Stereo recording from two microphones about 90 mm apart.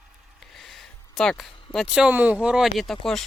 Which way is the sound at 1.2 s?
5° left (ahead or behind).